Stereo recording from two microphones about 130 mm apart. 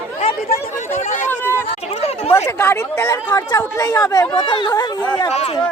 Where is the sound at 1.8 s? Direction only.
55° left (ahead or behind).